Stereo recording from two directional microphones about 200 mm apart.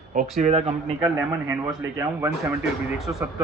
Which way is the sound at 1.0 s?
15° right (ahead or behind).